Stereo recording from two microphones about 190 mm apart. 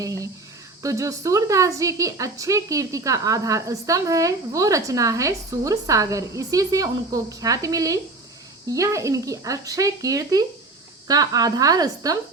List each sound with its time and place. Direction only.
0.0 s a woman's voice: 15° right (ahead or behind)